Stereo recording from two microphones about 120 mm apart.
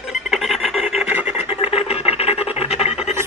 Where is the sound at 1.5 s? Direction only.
55° left (ahead or behind).